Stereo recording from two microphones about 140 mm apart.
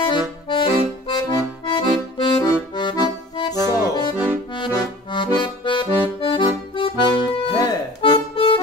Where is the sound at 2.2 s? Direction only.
35° left (ahead or behind).